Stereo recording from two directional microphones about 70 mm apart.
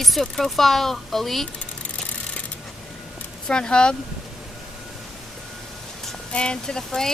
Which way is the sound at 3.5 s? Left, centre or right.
Centre.